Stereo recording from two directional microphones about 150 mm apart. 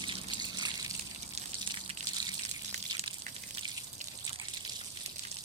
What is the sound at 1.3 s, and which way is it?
Water, 45° right (ahead or behind).